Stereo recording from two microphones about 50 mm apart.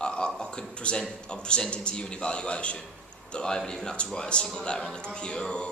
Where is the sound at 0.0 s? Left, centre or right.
Centre.